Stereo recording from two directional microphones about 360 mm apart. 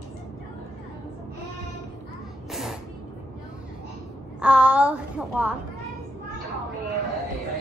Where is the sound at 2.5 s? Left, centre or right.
Centre.